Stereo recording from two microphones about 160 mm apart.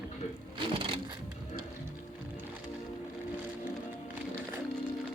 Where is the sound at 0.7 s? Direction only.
35° right (ahead or behind).